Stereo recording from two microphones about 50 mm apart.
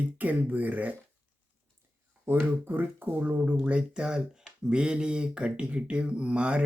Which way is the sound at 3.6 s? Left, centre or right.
Right.